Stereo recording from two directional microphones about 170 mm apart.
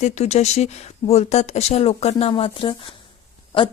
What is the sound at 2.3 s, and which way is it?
Speech, 30° left (ahead or behind).